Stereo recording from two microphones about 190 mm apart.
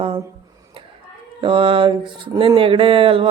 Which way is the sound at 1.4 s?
25° right (ahead or behind).